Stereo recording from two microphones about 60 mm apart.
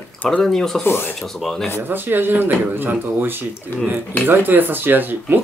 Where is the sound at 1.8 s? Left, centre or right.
Right.